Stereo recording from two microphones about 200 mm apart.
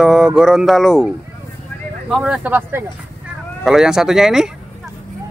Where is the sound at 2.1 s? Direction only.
Centre (ahead or behind).